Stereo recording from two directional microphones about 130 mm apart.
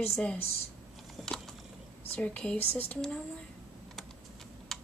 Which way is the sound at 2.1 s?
10° left (ahead or behind).